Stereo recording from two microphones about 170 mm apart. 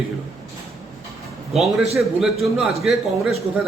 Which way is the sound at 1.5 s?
Centre (ahead or behind).